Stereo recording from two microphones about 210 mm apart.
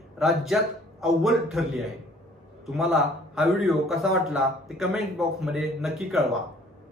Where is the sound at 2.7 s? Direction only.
Centre (ahead or behind).